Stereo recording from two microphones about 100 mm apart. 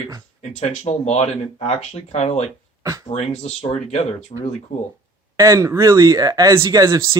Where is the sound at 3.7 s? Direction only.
90° left.